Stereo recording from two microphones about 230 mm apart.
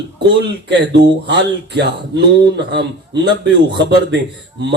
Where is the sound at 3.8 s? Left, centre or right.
Right.